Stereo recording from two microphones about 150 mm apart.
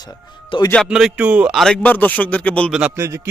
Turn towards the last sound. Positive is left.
turn(degrees=-20)  # may be behind; listen again after turning